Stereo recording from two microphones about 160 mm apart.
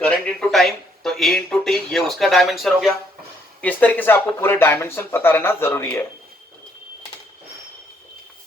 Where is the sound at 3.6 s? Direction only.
10° left (ahead or behind).